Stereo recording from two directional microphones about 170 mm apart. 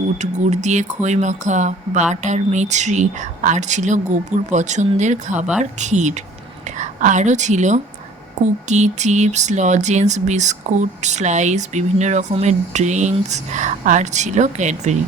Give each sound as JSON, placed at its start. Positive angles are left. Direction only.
{"t": 0.2, "sound": "a woman's voice", "side_deg": -45}